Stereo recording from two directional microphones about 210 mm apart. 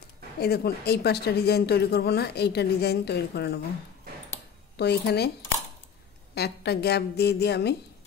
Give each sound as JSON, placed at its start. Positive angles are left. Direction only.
{"t": 0.4, "sound": "speech", "side_deg": 50}
{"t": 4.7, "sound": "speech", "side_deg": 50}
{"t": 6.3, "sound": "speech", "side_deg": 50}